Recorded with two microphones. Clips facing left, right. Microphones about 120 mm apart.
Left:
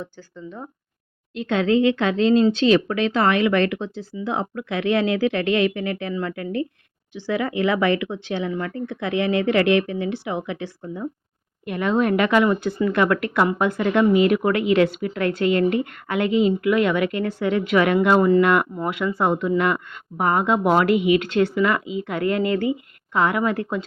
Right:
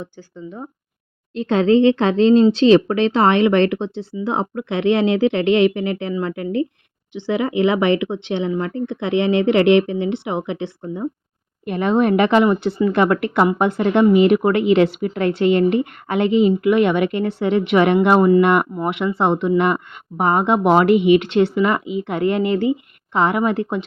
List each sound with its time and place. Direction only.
0.0 s speech: 15° right (ahead or behind)
1.3 s speech: 35° right (ahead or behind)